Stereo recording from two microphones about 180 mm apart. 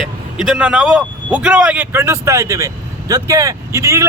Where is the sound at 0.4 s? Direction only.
5° right (ahead or behind).